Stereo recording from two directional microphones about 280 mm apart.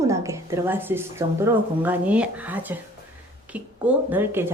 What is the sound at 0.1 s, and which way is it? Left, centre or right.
Speech, centre.